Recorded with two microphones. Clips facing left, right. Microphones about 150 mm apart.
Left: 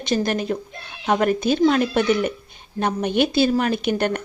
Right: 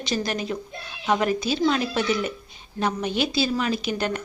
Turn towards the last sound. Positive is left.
turn(degrees=55)  # may be behind; listen again after turning